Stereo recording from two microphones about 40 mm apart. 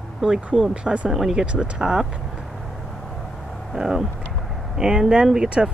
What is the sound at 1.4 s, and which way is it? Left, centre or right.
Speech, right.